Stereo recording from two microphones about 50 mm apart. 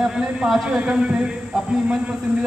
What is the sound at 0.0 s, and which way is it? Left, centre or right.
A man's voice, centre.